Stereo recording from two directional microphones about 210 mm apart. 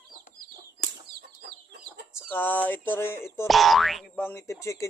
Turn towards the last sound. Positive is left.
turn(degrees=15)  # may be behind; listen again after turning